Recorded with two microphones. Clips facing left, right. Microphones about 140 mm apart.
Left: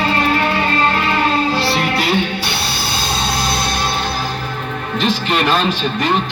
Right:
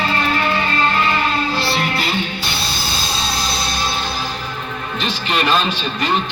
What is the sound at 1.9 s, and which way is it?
Music, 70° left (ahead or behind).